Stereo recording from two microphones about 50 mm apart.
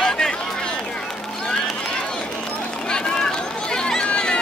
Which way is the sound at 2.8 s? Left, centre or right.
Centre.